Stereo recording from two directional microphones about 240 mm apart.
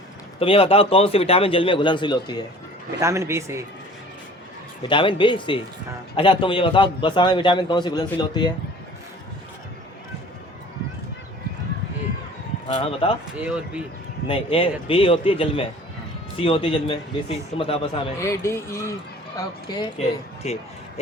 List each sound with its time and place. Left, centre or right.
0.3 s a man's voice: left
3.0 s a man's voice: centre
4.9 s a man's voice: left
12.6 s a man's voice: left
13.4 s speech: centre
14.3 s a man's voice: left
18.2 s a man's voice: centre